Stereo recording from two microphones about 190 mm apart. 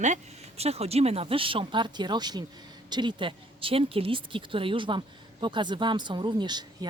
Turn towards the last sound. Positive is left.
turn(degrees=-20)  # may be behind; listen again after turning